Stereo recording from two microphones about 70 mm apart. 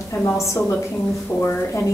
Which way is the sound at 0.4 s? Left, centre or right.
Left.